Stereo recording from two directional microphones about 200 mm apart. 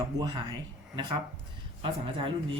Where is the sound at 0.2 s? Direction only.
25° right (ahead or behind).